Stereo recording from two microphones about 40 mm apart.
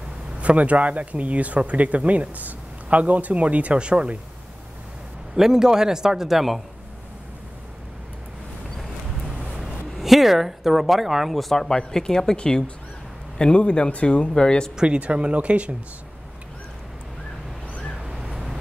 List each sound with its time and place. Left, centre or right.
0.4 s speech: right
5.3 s a man's voice: centre
9.2 s speech: centre
15.0 s speech: right
18.0 s a sound: centre